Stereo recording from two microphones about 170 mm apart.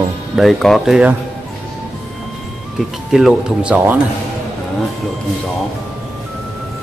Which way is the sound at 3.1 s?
Centre (ahead or behind).